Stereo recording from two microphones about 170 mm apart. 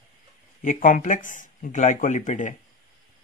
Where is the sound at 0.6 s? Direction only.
50° left (ahead or behind).